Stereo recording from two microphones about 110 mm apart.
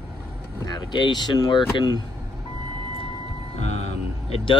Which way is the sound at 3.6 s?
90° left.